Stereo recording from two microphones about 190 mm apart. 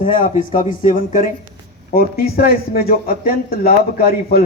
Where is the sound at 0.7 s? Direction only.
45° left (ahead or behind).